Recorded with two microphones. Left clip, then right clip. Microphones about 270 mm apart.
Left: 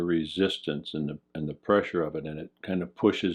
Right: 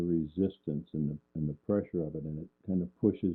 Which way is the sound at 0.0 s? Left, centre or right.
Centre.